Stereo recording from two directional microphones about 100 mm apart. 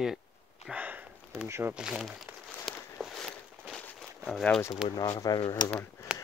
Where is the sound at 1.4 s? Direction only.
25° right (ahead or behind).